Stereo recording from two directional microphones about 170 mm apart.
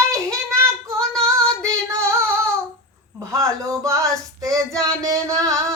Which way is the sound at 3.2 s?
20° right (ahead or behind).